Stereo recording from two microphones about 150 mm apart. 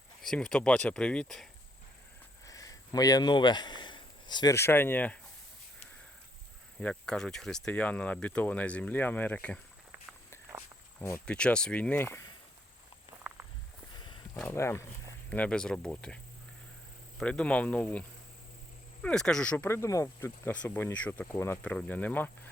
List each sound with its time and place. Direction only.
0.2 s speech: 5° left (ahead or behind)
2.5 s a sound: 20° left (ahead or behind)
4.5 s speech: 15° left (ahead or behind)
6.7 s speech: 5° left (ahead or behind)
11.3 s speech: 5° left (ahead or behind)
13.2 s walk: 10° right (ahead or behind)
13.9 s a sound: 30° left (ahead or behind)
14.4 s speech: 15° left (ahead or behind)
15.3 s speech: 10° left (ahead or behind)
19.0 s speech: 5° left (ahead or behind)